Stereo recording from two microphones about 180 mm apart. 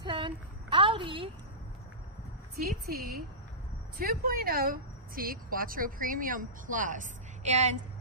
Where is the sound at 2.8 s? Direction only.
60° right (ahead or behind).